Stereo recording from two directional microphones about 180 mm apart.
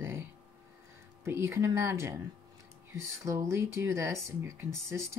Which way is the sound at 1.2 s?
15° right (ahead or behind).